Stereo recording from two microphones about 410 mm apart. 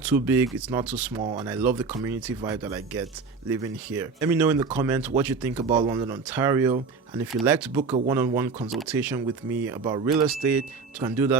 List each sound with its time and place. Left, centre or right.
0.0 s speech: centre
1.2 s speech: centre
1.5 s speech: centre